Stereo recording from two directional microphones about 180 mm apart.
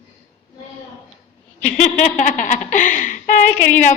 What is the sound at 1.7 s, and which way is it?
A woman's voice, 40° left (ahead or behind).